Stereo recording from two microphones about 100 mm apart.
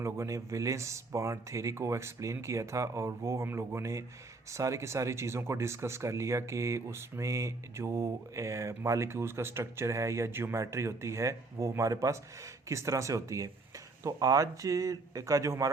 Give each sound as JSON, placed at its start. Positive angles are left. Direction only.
{"t": 0.0, "sound": "speech", "side_deg": -30}